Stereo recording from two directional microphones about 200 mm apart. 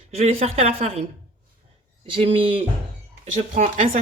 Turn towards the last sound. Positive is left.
turn(degrees=-40)  # may be behind; listen again after turning